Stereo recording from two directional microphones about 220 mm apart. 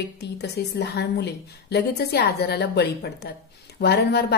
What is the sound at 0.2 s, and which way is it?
Speech, 50° left (ahead or behind).